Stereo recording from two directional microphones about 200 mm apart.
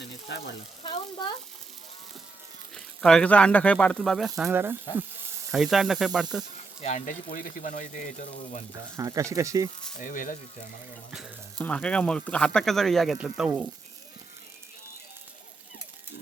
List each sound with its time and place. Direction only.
0.0 s frying: 60° left (ahead or behind)
0.8 s speech: 25° left (ahead or behind)
2.7 s speech: 5° left (ahead or behind)
4.4 s speech: 10° right (ahead or behind)
5.5 s speech: centre (ahead or behind)
6.8 s speech: 40° left (ahead or behind)
9.0 s speech: 15° right (ahead or behind)
10.0 s speech: 40° left (ahead or behind)
11.6 s speech: 5° left (ahead or behind)